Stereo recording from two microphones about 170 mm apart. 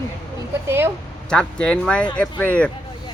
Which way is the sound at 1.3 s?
5° left (ahead or behind).